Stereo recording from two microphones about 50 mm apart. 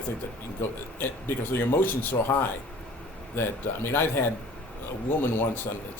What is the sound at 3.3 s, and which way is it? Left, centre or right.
Speech, left.